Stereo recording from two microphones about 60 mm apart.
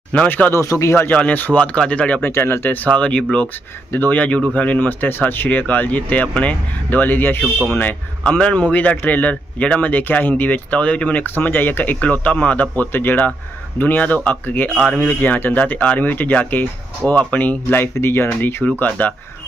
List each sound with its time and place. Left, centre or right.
0.1 s speech: left
0.7 s speech: left
1.1 s speech: left
2.2 s speech: left
2.9 s speech: centre
3.9 s speech: left
6.9 s speech: left
8.2 s speech: centre
14.7 s speech: centre
15.0 s speech: left
18.8 s speech: left